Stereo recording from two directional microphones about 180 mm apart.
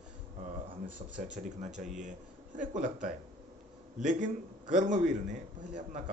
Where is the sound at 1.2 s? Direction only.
40° right (ahead or behind).